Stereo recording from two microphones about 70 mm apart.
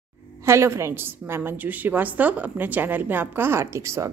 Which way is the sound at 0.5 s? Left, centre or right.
Right.